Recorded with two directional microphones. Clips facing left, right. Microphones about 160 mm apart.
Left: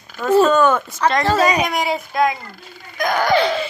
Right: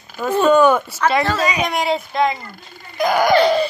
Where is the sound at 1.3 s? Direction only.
45° left (ahead or behind).